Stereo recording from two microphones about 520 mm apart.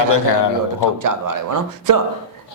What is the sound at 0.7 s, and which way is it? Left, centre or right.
Speech, right.